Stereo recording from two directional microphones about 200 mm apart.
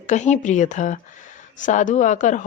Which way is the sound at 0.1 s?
35° left (ahead or behind).